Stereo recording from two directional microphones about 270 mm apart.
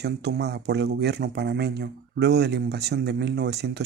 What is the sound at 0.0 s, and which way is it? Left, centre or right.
Speech, right.